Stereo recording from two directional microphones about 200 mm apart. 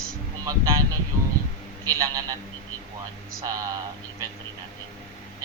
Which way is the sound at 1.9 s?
15° right (ahead or behind).